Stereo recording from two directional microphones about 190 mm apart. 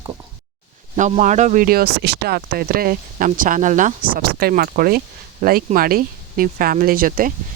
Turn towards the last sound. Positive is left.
turn(degrees=-50)  # may be behind; listen again after turning